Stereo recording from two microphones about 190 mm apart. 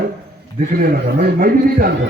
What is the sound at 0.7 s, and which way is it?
A man's voice, 50° right (ahead or behind).